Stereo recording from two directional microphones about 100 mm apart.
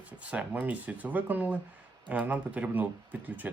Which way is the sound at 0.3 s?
15° right (ahead or behind).